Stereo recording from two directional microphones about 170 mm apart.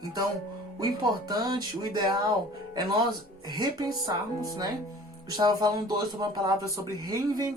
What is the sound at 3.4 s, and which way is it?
Speech, 25° right (ahead or behind).